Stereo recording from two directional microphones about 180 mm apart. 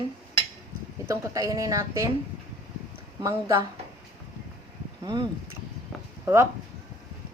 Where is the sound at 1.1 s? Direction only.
20° right (ahead or behind).